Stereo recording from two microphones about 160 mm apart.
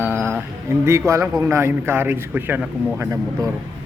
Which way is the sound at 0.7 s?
15° right (ahead or behind).